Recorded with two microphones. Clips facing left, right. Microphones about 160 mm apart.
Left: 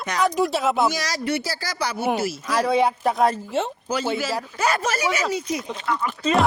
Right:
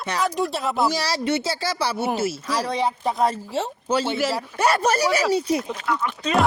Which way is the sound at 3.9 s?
30° right (ahead or behind).